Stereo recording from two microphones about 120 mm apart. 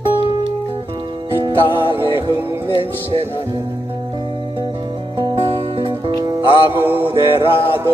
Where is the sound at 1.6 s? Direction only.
45° left (ahead or behind).